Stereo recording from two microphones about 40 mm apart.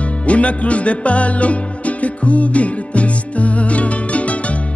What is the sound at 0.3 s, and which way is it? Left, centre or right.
Music, left.